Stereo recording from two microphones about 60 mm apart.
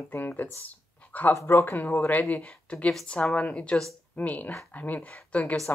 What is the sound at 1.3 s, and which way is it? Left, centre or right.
Speech, left.